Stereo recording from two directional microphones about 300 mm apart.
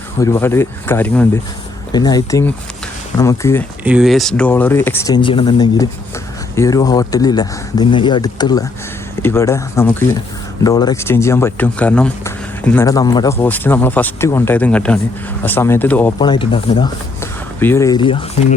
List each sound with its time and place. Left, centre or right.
0.2 s speech: centre
3.8 s speech: centre